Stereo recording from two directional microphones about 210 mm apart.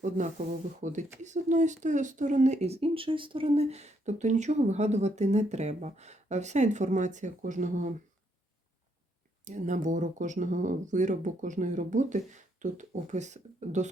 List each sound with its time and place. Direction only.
0.8 s speech: 35° right (ahead or behind)
9.4 s speech: 35° right (ahead or behind)